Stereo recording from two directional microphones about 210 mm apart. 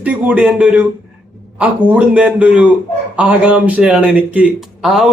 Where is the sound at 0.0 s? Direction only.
5° right (ahead or behind).